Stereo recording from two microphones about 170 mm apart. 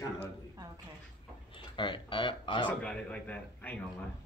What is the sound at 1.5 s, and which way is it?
Speech, 30° left (ahead or behind).